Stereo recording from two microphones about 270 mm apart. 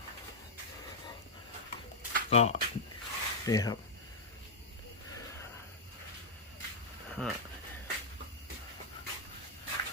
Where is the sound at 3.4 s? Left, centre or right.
Centre.